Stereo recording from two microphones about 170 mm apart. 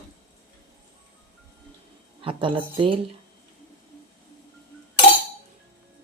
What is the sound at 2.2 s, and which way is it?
Speech, 30° right (ahead or behind).